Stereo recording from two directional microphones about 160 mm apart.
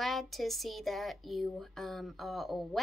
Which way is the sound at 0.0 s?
Centre (ahead or behind).